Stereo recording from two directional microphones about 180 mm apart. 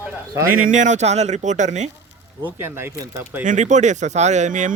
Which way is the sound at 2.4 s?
15° right (ahead or behind).